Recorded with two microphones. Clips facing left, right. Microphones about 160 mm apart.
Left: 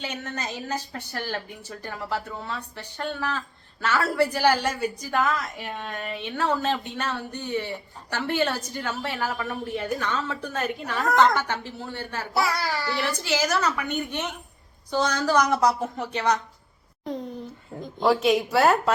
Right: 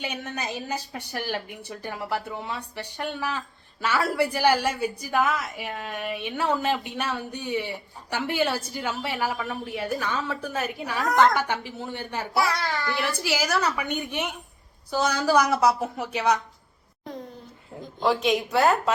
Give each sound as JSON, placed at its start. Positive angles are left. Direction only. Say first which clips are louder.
{"t": 0.0, "sound": "a woman's voice", "louder": "right 1 dB", "side_deg": -10}
{"t": 12.3, "sound": "a woman's voice", "louder": "even", "side_deg": 0}
{"t": 13.0, "sound": "a woman's voice", "louder": "left 2 dB", "side_deg": -10}
{"t": 18.0, "sound": "a woman's voice", "louder": "left 2 dB", "side_deg": 5}